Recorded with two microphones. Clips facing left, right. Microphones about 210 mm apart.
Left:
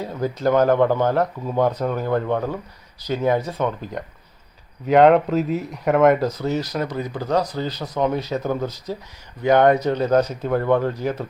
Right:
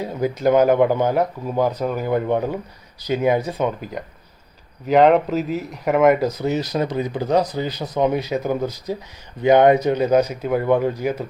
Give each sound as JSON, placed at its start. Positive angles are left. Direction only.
{"t": 0.0, "sound": "speech", "side_deg": -15}